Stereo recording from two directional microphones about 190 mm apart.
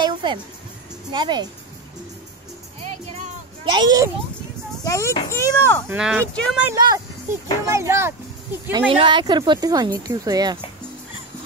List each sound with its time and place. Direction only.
0.0 s a sound: 25° right (ahead or behind)
1.1 s speech: 25° right (ahead or behind)
3.7 s speech: 20° right (ahead or behind)
4.8 s a child's voice: 15° left (ahead or behind)
5.9 s speech: 5° right (ahead or behind)
6.6 s speech: 20° right (ahead or behind)
8.7 s speech: 25° right (ahead or behind)